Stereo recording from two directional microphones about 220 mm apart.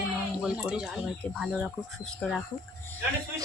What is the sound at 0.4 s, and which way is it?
Speech, 5° right (ahead or behind).